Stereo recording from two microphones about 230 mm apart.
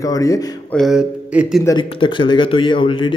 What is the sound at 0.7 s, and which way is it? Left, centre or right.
Speech, centre.